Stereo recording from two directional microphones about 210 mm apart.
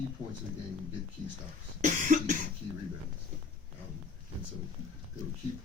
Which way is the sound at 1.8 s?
35° right (ahead or behind).